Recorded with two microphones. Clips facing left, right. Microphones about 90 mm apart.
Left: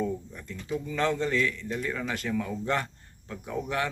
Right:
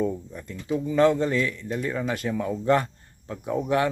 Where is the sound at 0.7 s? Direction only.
20° right (ahead or behind).